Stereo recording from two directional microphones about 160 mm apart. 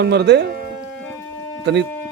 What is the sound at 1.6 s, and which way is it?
Speech, 90° right.